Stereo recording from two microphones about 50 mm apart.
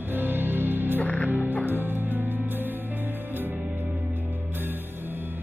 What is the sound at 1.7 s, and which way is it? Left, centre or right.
Music, right.